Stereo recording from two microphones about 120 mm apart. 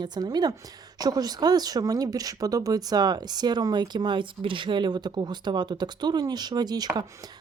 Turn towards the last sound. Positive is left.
turn(degrees=-35)  # may be behind; listen again after turning